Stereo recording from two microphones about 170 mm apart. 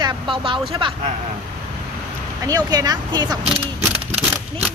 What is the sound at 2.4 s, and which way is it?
Speech, 20° right (ahead or behind).